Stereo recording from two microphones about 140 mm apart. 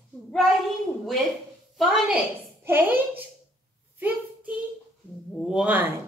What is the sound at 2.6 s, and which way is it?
Speech, 15° right (ahead or behind).